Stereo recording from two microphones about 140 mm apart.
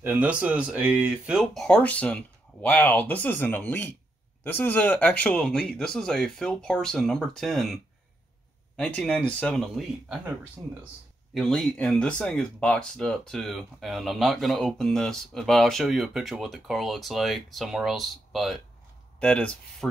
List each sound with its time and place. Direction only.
0.0 s speech: 10° right (ahead or behind); by 9.8 s 5° left (ahead or behind)
10.0 s speech: 10° right (ahead or behind)
11.3 s speech: centre (ahead or behind)